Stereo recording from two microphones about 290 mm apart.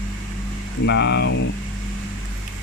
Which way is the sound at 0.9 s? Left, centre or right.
Left.